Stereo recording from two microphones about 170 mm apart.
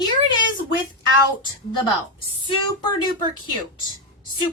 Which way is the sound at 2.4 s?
25° left (ahead or behind).